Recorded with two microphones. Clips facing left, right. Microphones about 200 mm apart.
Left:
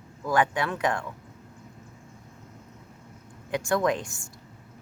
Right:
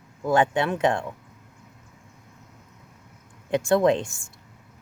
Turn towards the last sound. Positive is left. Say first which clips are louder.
# right 5 dB
turn(degrees=-25)  # may be behind; listen again after turning